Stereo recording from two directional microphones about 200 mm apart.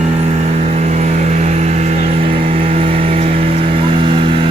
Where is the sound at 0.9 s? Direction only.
35° right (ahead or behind).